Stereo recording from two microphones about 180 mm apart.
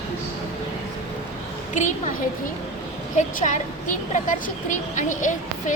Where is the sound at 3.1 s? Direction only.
45° left (ahead or behind).